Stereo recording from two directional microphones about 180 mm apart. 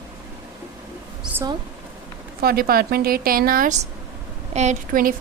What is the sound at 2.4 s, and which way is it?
A woman's voice, 55° right (ahead or behind).